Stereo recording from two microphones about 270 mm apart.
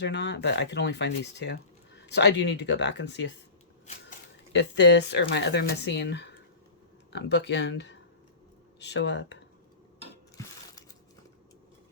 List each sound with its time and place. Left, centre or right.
0.0 s speech: left
4.5 s speech: left